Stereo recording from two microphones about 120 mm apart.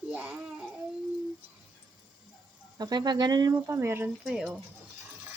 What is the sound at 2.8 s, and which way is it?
Speech, 35° right (ahead or behind).